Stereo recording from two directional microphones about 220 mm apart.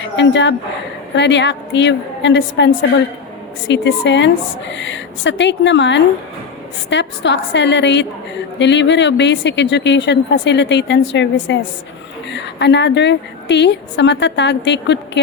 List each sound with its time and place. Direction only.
0.0 s a woman's voice: 55° left (ahead or behind)
3.7 s speech: 55° left (ahead or behind)